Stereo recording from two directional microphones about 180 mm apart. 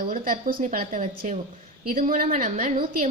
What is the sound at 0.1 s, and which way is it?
A woman's voice, 55° right (ahead or behind).